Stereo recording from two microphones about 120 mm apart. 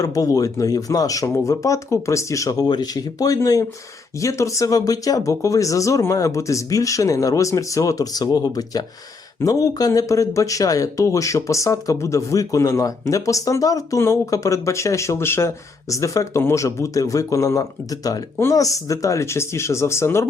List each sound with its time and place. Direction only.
0.0 s speech: 30° left (ahead or behind)